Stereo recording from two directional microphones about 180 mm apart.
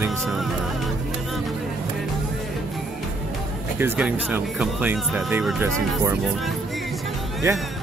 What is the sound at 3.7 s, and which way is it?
Speech, 10° right (ahead or behind).